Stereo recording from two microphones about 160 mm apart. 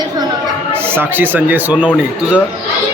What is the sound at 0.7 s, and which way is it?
A man's voice, 15° right (ahead or behind).